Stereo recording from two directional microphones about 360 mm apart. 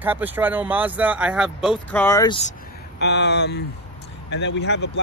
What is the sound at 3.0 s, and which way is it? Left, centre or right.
Speech, left.